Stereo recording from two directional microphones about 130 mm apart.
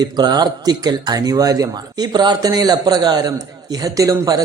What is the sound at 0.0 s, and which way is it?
Speech, 30° right (ahead or behind).